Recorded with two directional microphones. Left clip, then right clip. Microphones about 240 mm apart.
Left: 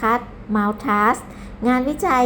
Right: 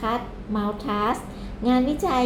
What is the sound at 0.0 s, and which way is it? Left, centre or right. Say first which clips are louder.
A woman's voice: left 7 dB; left.